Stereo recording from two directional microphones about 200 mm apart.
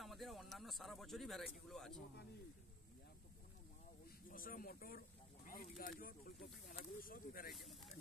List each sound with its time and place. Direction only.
0.0 s speech: centre (ahead or behind)
4.3 s speech: 45° left (ahead or behind)
7.5 s speech: centre (ahead or behind)